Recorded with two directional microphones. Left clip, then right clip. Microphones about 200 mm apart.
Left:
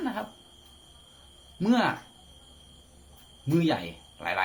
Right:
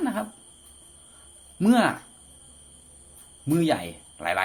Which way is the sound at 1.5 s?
35° right (ahead or behind).